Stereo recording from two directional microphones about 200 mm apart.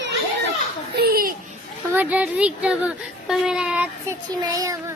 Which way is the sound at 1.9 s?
10° right (ahead or behind).